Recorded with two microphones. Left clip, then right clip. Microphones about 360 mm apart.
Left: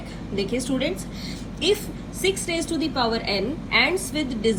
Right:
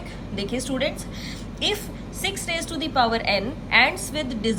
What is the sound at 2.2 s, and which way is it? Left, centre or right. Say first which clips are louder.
A woman's voice: left 3 dB; right.